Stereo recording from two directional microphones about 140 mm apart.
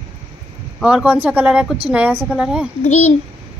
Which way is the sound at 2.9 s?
50° left (ahead or behind).